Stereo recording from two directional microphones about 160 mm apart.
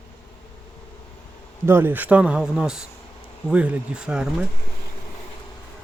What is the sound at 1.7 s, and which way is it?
Speech, 15° right (ahead or behind).